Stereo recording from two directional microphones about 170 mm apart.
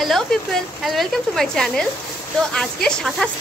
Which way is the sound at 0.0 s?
Centre (ahead or behind).